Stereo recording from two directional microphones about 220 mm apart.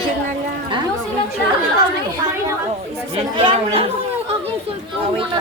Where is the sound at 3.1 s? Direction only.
25° right (ahead or behind).